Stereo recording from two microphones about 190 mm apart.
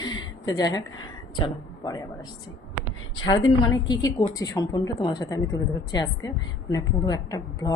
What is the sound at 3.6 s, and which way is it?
A woman's voice, 20° left (ahead or behind).